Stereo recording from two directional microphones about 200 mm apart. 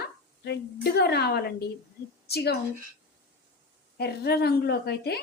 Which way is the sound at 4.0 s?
55° left (ahead or behind).